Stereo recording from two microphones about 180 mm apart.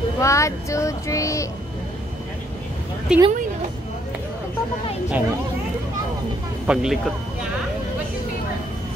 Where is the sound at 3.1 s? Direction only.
5° right (ahead or behind).